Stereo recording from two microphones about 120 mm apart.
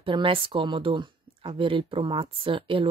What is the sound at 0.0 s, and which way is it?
Speech, 45° right (ahead or behind).